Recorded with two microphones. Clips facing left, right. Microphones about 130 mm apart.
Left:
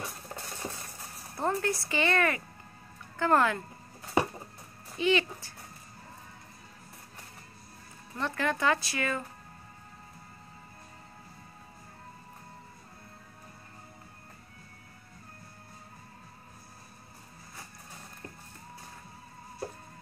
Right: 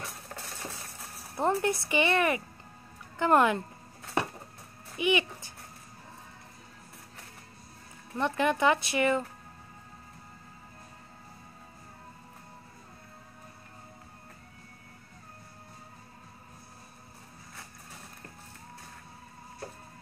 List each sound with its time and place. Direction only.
0.0 s coin: centre (ahead or behind)
1.3 s speech: 15° right (ahead or behind)
4.0 s a sound: centre (ahead or behind)
4.9 s speech: 15° right (ahead or behind)
8.2 s speech: 20° right (ahead or behind)